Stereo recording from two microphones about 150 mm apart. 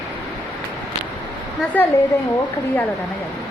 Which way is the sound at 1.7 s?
10° left (ahead or behind).